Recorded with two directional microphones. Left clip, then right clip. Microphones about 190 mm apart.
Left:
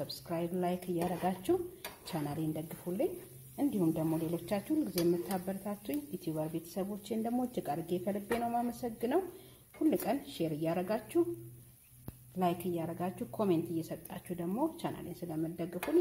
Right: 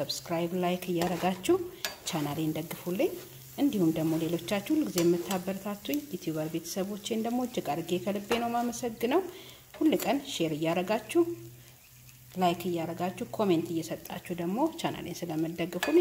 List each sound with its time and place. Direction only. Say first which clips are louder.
0.0 s speech: right 6 dB; 5° right (ahead or behind)
12.4 s speech: right 5 dB; centre (ahead or behind)